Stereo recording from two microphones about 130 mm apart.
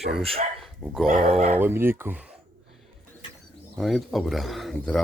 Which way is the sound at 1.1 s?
90° right.